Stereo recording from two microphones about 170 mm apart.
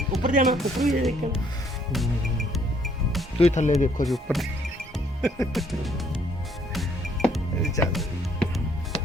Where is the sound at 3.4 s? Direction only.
40° left (ahead or behind).